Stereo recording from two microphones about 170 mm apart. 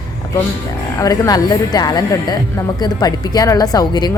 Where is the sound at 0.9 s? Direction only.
20° left (ahead or behind).